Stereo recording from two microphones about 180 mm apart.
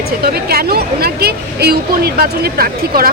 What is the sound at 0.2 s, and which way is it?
Speech, 60° right (ahead or behind).